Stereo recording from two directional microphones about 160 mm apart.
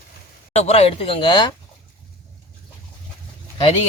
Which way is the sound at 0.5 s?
40° left (ahead or behind).